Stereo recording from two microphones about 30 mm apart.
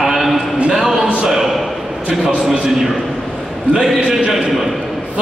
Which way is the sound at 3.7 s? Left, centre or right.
Right.